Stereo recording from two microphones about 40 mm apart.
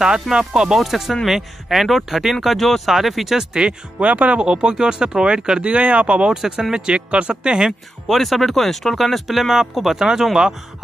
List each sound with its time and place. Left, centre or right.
0.3 s speech: centre
0.7 s speech: centre
4.0 s speech: right
4.4 s speech: right
6.3 s speech: centre; by 7.5 s right
8.1 s speech: centre